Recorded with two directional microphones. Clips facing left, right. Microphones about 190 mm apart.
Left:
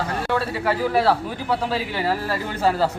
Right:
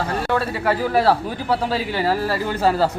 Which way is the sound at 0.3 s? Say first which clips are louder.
Right 2 dB; 50° right (ahead or behind).